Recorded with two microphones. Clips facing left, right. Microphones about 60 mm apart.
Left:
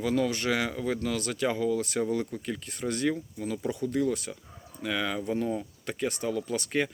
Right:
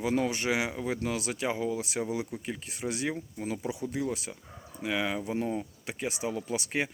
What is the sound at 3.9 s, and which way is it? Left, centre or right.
Speech, centre.